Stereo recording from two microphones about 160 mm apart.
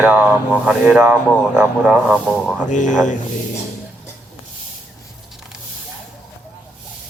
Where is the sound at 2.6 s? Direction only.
50° left (ahead or behind).